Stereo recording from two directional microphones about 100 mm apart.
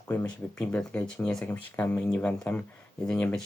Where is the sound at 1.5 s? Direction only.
20° left (ahead or behind).